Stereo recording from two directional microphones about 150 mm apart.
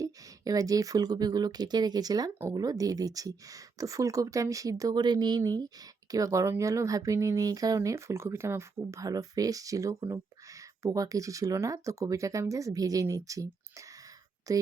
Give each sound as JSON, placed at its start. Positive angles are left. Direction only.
{"t": 0.0, "sound": "speech", "side_deg": -25}